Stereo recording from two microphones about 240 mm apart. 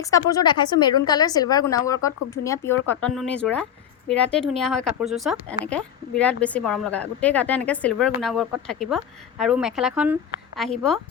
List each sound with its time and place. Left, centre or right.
0.0 s a woman's voice: centre